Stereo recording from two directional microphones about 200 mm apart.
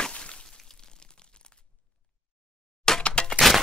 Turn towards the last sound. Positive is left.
turn(degrees=0)  # may be behind; listen again after turning